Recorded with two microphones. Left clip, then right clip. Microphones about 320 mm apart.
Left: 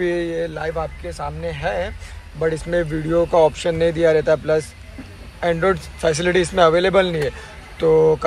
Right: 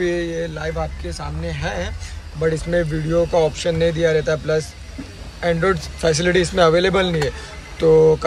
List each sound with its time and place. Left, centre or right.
0.0 s speech: centre